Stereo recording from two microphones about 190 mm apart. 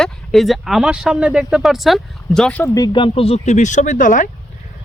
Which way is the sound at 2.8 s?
25° left (ahead or behind).